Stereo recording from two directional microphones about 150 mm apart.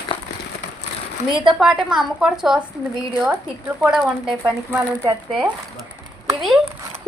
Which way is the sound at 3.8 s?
5° right (ahead or behind).